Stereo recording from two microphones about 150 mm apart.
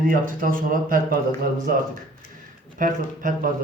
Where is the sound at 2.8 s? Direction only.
65° right (ahead or behind).